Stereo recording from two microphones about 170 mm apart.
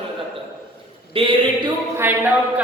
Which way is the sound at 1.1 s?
30° right (ahead or behind).